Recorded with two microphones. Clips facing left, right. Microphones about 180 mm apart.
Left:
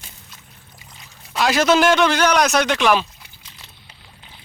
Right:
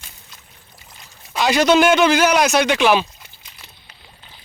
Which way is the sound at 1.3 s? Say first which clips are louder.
Right 1 dB; centre (ahead or behind).